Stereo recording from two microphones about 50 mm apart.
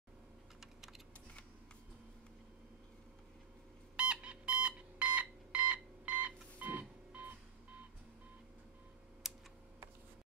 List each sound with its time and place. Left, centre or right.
0.6 s typing: centre
3.9 s a sound: right
9.2 s computer keyboard: centre